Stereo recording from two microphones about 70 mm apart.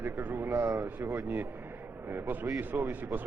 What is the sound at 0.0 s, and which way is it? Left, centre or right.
Speech, right.